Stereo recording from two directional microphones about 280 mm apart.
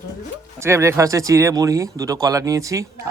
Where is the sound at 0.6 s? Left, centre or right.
Centre.